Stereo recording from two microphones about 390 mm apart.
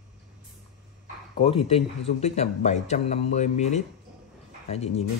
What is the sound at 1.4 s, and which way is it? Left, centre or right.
A man's voice, centre.